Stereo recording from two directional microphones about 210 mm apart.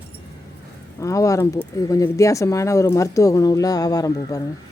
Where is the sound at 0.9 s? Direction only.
15° left (ahead or behind).